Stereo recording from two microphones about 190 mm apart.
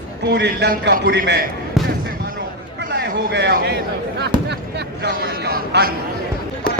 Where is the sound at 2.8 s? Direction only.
65° right (ahead or behind).